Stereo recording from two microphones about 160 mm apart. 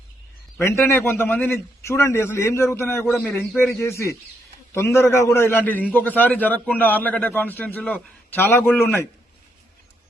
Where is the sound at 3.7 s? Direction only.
15° left (ahead or behind).